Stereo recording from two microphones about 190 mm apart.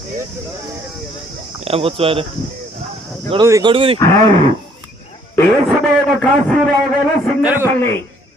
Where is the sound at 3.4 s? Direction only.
20° right (ahead or behind).